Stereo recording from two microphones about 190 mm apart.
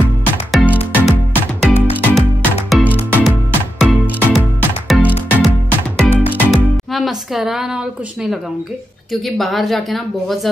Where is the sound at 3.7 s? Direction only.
5° right (ahead or behind).